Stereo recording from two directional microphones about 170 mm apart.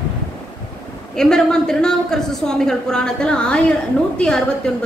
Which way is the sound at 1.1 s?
5° left (ahead or behind).